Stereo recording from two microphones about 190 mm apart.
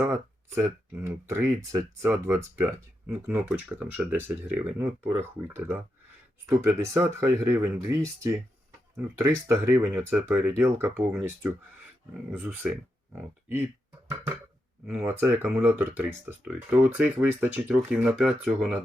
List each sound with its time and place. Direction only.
0.0 s speech: 15° right (ahead or behind)
14.8 s speech: 10° right (ahead or behind)